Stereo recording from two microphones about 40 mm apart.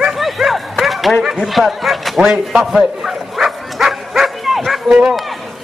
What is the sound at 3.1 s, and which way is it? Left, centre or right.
Bow-wow, centre.